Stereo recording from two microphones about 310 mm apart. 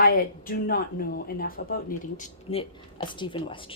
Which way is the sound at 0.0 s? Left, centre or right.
Left.